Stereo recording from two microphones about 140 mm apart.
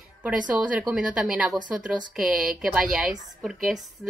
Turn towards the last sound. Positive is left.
turn(degrees=-5)  # may be behind; listen again after turning